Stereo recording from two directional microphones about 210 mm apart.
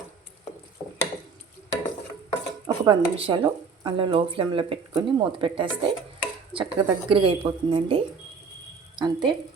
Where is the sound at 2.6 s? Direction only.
20° right (ahead or behind).